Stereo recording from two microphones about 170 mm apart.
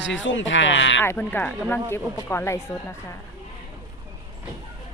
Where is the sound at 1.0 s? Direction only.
10° left (ahead or behind).